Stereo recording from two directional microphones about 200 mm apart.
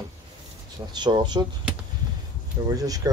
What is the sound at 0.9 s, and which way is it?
Speech, 20° right (ahead or behind).